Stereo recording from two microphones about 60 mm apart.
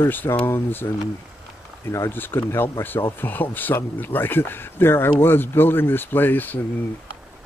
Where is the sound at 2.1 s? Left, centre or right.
Left.